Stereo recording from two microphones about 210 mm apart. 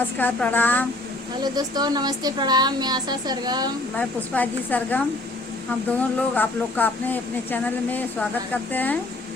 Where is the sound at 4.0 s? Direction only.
10° left (ahead or behind).